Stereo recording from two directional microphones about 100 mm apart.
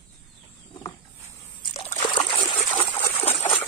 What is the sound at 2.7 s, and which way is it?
Trickle, 80° left.